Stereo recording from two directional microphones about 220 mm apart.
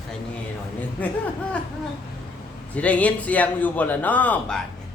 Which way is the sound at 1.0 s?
5° left (ahead or behind).